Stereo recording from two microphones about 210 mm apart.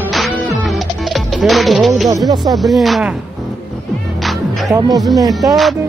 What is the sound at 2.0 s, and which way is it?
Speech, 15° right (ahead or behind).